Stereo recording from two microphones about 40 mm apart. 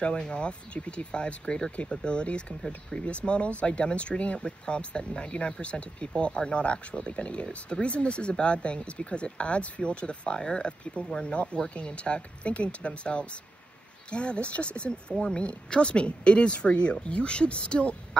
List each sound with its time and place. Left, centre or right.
0.0 s speech: left